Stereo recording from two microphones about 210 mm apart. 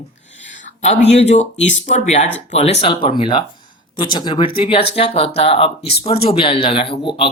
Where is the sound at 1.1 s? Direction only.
30° left (ahead or behind).